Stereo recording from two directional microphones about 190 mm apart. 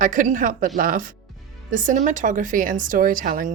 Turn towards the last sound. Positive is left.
turn(degrees=-45)  # may be behind; listen again after turning